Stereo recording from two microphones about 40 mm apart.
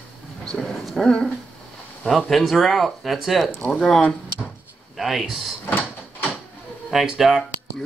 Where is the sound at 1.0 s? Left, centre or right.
Left.